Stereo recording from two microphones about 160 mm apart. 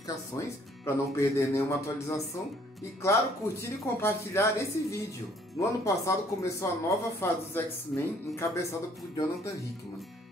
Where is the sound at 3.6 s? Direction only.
15° left (ahead or behind).